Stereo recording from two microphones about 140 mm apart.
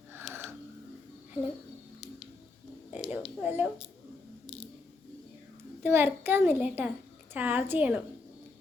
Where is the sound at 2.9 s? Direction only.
10° right (ahead or behind).